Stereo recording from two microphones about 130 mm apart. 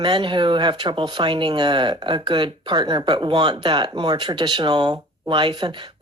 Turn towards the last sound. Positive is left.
turn(degrees=-35)  # may be behind; listen again after turning